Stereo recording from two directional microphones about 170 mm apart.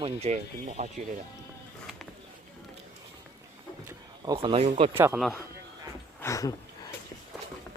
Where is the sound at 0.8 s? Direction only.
50° right (ahead or behind).